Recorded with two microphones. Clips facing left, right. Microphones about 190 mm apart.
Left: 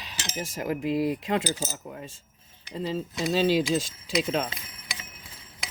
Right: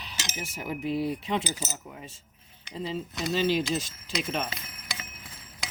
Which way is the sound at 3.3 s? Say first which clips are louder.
Left 3 dB; 90° left.